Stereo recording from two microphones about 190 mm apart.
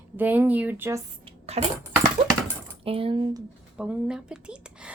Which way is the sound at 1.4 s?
35° right (ahead or behind).